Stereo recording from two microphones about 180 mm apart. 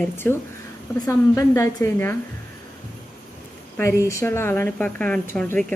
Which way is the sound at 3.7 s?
15° left (ahead or behind).